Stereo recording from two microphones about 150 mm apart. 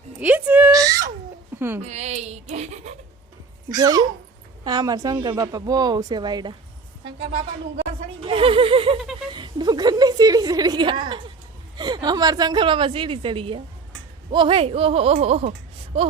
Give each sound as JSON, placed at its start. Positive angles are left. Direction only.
{"t": 0.2, "sound": "a sound", "side_deg": -10}
{"t": 1.5, "sound": "speech", "side_deg": -15}
{"t": 1.8, "sound": "speech", "side_deg": -45}
{"t": 3.7, "sound": "speech", "side_deg": -25}
{"t": 8.2, "sound": "a woman's voice", "side_deg": -35}